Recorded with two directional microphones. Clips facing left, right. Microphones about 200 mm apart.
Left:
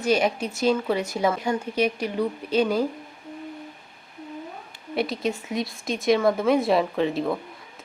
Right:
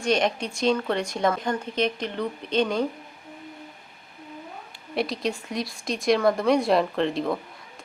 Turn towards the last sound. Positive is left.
turn(degrees=5)  # may be behind; listen again after turning